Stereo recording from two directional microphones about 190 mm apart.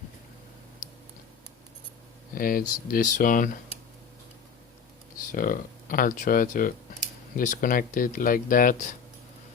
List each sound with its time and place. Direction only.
2.3 s speech: 50° left (ahead or behind)
5.3 s speech: 45° left (ahead or behind)